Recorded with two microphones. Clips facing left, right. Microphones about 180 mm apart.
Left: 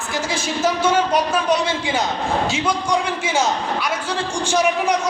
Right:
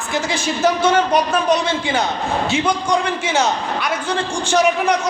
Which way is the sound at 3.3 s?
60° right (ahead or behind).